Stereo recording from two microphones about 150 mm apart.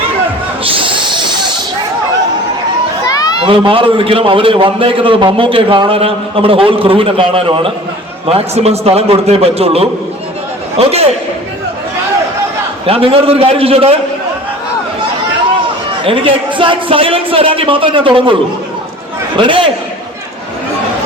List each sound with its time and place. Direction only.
0.6 s hiss: 35° right (ahead or behind)
3.4 s a man's voice: 35° right (ahead or behind)
12.8 s a man's voice: 40° right (ahead or behind)
16.0 s a man's voice: 35° right (ahead or behind)
19.4 s a man's voice: 35° right (ahead or behind)